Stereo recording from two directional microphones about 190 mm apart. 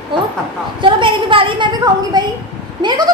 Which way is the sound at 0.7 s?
25° right (ahead or behind).